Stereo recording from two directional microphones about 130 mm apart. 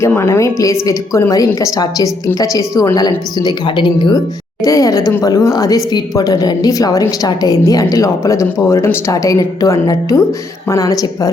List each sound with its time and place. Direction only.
0.1 s a woman's voice: 20° left (ahead or behind); by 4.2 s 35° left (ahead or behind)
4.6 s a woman's voice: 25° left (ahead or behind)